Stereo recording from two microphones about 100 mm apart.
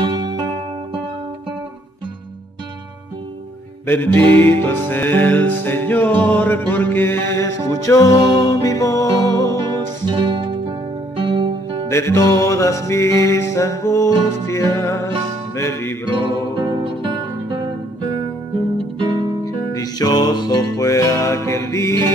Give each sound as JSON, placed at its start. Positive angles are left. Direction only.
{"t": 0.0, "sound": "music", "side_deg": -50}
{"t": 3.8, "sound": "music", "side_deg": 25}
{"t": 10.0, "sound": "music", "side_deg": -50}
{"t": 11.9, "sound": "music", "side_deg": 25}
{"t": 16.5, "sound": "music", "side_deg": -45}
{"t": 18.9, "sound": "music", "side_deg": -45}
{"t": 19.4, "sound": "music", "side_deg": 35}